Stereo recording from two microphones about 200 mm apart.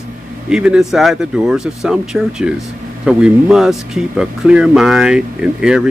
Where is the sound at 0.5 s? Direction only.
5° right (ahead or behind).